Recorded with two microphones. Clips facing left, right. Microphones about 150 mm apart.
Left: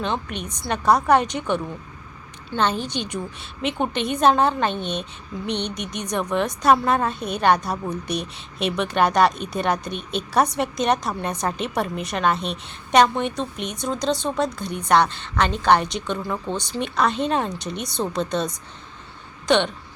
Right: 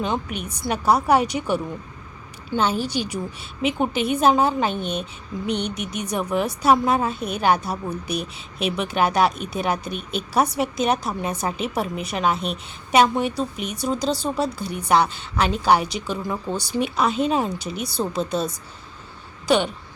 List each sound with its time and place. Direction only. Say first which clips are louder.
0.0 s a woman's voice: right 1 dB; 10° right (ahead or behind)